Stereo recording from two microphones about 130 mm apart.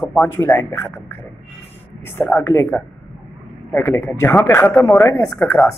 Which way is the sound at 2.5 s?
15° left (ahead or behind).